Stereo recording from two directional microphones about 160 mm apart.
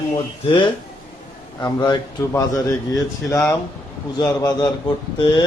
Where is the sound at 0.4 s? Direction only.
30° left (ahead or behind).